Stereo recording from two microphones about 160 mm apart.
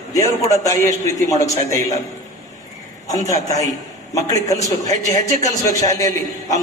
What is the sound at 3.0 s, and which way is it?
A man's voice, 20° left (ahead or behind).